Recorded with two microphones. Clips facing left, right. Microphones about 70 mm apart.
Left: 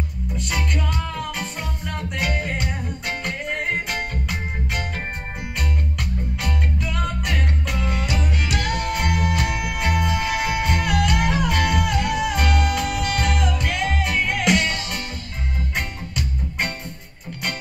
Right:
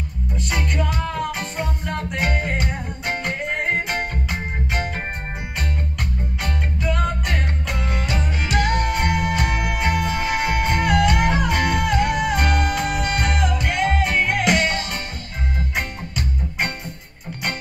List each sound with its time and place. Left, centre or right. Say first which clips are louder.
0.4 s music: right 2 dB; centre
1.6 s music: right 4 dB; right
6.8 s music: right 3 dB; centre